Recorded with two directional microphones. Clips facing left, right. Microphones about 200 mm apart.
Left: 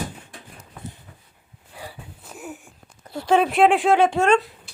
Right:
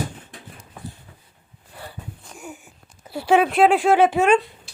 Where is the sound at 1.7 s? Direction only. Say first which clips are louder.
Right 1 dB; 10° left (ahead or behind).